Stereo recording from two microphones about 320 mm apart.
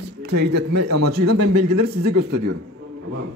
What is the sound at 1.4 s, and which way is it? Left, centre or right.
Speech, right.